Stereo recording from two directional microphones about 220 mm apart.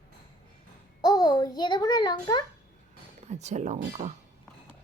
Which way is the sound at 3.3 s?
30° right (ahead or behind).